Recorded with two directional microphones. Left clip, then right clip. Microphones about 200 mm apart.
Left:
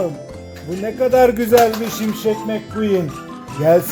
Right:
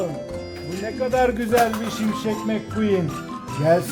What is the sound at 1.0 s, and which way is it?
Speech, 50° left (ahead or behind).